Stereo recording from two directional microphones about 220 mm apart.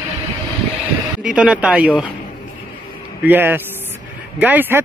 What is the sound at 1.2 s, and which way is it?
Speech, 5° right (ahead or behind).